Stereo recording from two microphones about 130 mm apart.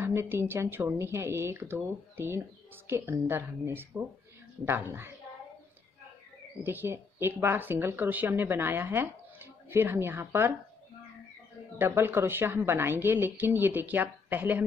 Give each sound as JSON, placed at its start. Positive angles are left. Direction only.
{"t": 0.0, "sound": "speech", "side_deg": -20}
{"t": 6.6, "sound": "speech", "side_deg": -15}
{"t": 11.8, "sound": "speech", "side_deg": -15}